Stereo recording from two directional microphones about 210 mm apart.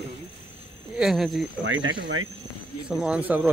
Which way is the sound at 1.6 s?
70° right (ahead or behind).